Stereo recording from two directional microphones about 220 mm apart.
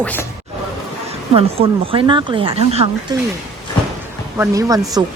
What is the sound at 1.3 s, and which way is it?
Speech, 25° right (ahead or behind).